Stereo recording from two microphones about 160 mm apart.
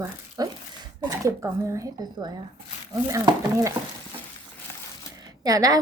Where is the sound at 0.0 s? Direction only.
25° right (ahead or behind).